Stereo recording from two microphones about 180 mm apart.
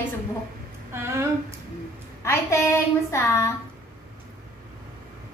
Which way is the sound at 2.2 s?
15° left (ahead or behind).